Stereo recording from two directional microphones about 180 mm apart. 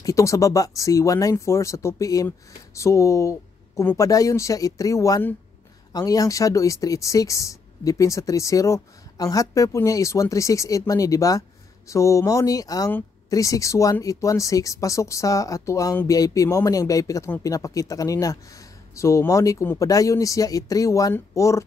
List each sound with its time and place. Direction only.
0.0 s speech: 15° left (ahead or behind)